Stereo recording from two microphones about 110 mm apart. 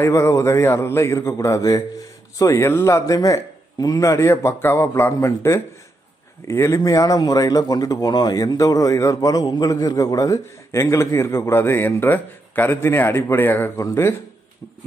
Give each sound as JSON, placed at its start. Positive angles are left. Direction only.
{"t": 0.0, "sound": "a man's voice", "side_deg": 25}